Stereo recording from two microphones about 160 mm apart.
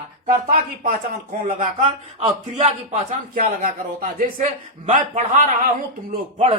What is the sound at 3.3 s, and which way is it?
A man's voice, 60° right (ahead or behind).